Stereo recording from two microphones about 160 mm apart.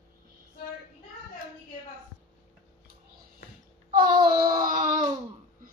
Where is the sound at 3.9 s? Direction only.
60° right (ahead or behind).